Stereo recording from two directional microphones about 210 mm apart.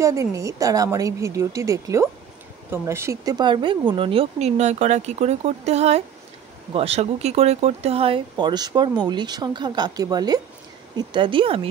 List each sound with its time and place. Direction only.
0.0 s a woman's voice: 15° right (ahead or behind)